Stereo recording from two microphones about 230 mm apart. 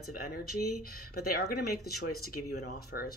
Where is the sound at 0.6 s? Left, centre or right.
Left.